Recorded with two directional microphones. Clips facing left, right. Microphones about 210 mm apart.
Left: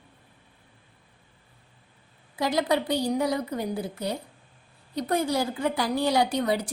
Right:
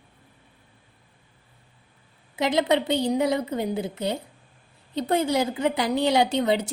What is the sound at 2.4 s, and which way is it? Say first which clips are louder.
A woman's voice: right 3 dB; 20° right (ahead or behind).